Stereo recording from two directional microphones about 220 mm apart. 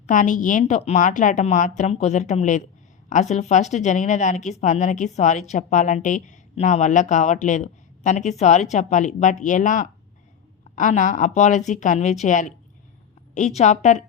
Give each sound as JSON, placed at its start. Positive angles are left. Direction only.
{"t": 0.1, "sound": "a woman's voice", "side_deg": 35}